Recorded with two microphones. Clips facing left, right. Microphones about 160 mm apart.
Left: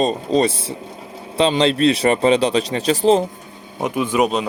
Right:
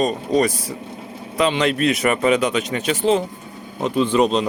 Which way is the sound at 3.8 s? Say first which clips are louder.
Right 1 dB; 15° left (ahead or behind).